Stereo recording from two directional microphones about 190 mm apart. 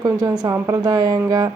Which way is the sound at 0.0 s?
20° right (ahead or behind).